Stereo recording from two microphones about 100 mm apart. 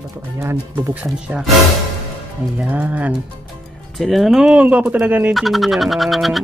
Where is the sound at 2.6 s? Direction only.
15° right (ahead or behind).